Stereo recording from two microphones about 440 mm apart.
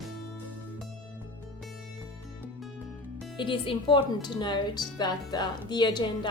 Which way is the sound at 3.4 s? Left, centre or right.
Centre.